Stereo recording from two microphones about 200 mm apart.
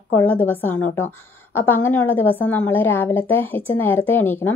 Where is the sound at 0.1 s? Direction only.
10° left (ahead or behind).